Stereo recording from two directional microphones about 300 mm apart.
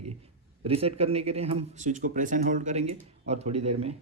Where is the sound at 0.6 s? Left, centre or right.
Centre.